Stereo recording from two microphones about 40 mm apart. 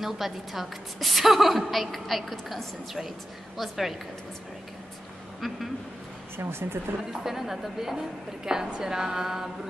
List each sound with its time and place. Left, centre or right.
0.0 s a woman's voice: centre
6.3 s speech: right
7.1 s a woman's voice: centre